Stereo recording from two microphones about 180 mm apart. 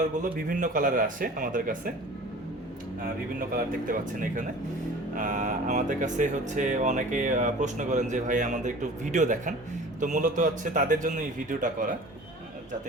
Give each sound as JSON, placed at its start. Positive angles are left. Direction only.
{"t": 0.2, "sound": "speech", "side_deg": -50}
{"t": 3.5, "sound": "speech", "side_deg": -50}